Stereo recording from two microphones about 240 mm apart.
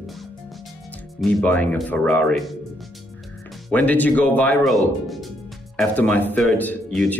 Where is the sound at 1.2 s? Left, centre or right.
Centre.